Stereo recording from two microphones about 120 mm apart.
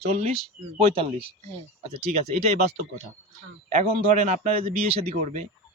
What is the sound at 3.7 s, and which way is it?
Speech, 70° right (ahead or behind).